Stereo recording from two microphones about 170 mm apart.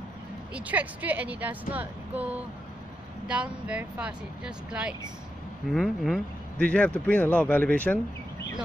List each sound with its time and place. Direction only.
0.6 s a woman's voice: 10° right (ahead or behind); by 8.0 s 10° left (ahead or behind)